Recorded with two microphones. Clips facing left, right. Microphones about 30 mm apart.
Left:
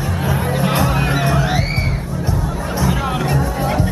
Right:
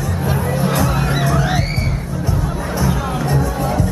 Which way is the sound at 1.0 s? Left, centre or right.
Centre.